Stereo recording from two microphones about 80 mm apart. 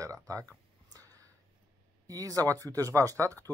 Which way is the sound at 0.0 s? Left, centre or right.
Right.